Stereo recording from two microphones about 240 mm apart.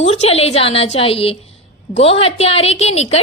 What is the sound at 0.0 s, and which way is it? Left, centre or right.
A woman's voice, left.